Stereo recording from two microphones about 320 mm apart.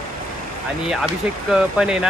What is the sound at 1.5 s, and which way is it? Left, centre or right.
Speech, centre.